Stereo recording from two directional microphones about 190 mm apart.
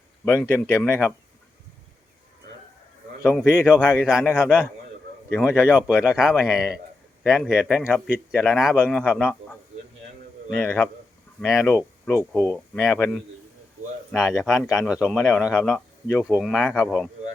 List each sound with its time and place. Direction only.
0.4 s speech: 10° left (ahead or behind)
3.2 s speech: 5° right (ahead or behind)
10.5 s speech: 10° left (ahead or behind)